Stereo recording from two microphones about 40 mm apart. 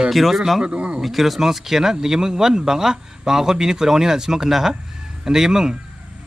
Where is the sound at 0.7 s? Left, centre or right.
Right.